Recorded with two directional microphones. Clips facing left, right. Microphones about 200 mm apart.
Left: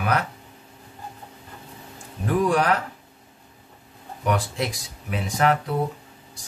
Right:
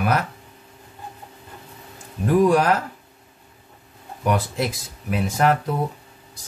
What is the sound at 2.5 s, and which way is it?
Speech, 40° right (ahead or behind).